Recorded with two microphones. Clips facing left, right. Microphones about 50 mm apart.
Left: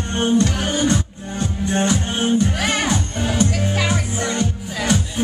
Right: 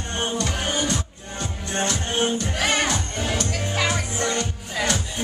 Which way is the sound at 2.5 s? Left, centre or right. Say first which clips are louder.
Left 2 dB; centre.